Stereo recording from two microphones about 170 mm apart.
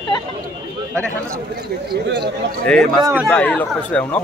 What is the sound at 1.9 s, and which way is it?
Speech, 70° right (ahead or behind).